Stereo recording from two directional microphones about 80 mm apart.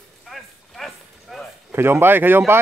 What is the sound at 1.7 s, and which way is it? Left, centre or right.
Speech, right.